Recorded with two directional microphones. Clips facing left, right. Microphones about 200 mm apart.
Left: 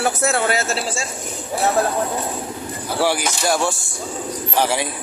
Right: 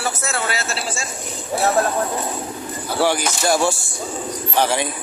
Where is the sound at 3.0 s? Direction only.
10° left (ahead or behind).